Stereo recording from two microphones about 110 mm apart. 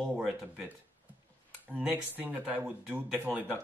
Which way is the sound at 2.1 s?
15° right (ahead or behind).